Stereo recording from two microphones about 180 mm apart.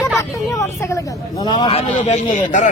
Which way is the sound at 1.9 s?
40° left (ahead or behind).